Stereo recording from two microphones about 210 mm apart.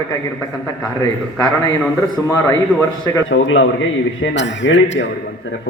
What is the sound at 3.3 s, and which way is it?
Speech, 65° left (ahead or behind).